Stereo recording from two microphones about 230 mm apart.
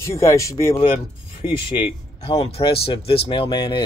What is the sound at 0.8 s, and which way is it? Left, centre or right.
Speech, left.